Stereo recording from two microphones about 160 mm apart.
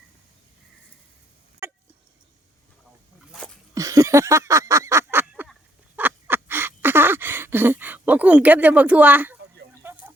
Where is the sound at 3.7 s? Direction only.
20° right (ahead or behind).